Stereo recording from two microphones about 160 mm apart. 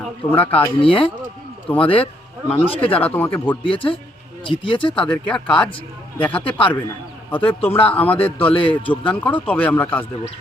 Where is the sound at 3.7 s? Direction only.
35° left (ahead or behind).